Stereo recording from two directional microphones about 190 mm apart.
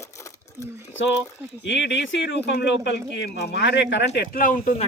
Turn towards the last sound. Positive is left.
turn(degrees=45)  # may be behind; listen again after turning